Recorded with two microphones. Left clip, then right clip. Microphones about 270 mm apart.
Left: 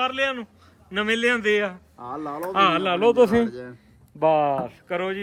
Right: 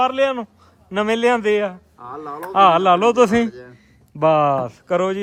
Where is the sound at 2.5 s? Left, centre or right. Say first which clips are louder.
Right 7 dB; centre.